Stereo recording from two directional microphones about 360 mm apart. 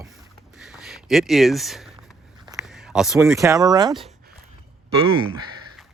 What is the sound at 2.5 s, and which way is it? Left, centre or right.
Speech, centre.